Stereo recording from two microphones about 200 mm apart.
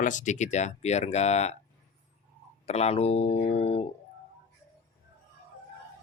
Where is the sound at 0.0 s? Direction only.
40° left (ahead or behind).